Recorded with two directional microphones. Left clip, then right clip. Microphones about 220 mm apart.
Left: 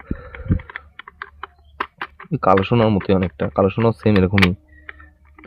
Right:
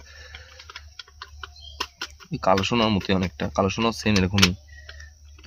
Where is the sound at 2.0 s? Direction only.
35° left (ahead or behind).